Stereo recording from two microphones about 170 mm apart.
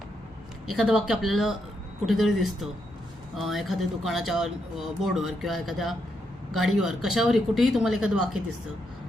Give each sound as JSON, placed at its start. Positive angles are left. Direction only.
{"t": 0.7, "sound": "speech", "side_deg": -5}